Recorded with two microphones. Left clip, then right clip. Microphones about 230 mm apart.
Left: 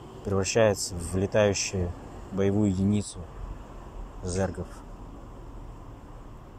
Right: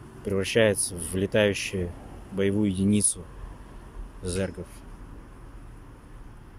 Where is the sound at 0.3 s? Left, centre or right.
Centre.